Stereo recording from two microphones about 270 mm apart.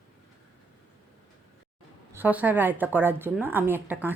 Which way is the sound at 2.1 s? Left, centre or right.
Centre.